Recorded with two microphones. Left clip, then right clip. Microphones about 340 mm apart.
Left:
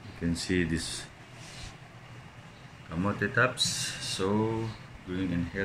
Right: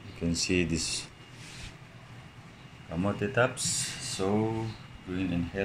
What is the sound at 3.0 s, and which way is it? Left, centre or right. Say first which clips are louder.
Speech: left 1 dB; centre.